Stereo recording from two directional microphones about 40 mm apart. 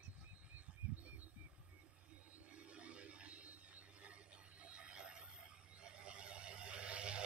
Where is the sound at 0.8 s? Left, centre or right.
Right.